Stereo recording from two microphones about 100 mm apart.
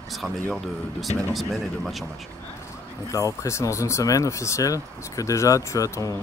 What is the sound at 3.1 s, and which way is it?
Speech, 35° left (ahead or behind).